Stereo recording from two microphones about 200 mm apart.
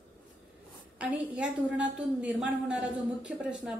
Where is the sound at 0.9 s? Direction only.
5° right (ahead or behind).